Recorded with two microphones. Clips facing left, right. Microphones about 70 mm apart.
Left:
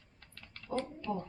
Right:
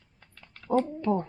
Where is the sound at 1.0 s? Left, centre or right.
Right.